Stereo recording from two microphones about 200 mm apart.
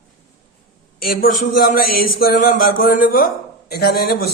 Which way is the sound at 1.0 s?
45° left (ahead or behind).